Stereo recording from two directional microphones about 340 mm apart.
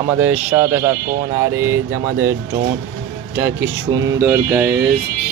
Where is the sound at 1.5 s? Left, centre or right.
Right.